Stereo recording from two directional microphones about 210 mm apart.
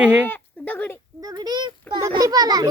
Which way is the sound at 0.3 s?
10° left (ahead or behind).